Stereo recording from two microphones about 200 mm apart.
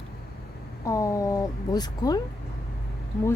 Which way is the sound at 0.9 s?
15° left (ahead or behind).